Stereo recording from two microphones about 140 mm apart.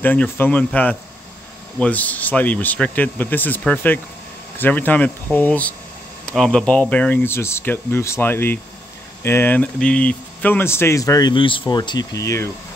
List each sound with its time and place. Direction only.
0.0 s speech: 10° left (ahead or behind)